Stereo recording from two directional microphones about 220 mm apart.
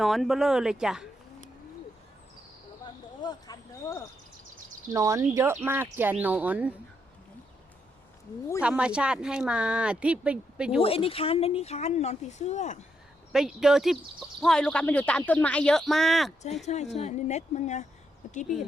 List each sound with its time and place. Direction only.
0.0 s speech: centre (ahead or behind)
2.8 s a sound: 20° left (ahead or behind)
4.9 s speech: 15° right (ahead or behind)
8.6 s speech: 5° right (ahead or behind)
10.8 s speech: 25° left (ahead or behind)
13.3 s speech: centre (ahead or behind)
16.6 s speech: 30° left (ahead or behind)